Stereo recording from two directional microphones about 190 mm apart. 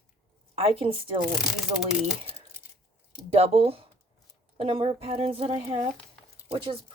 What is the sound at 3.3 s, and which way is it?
A woman's voice, 30° right (ahead or behind).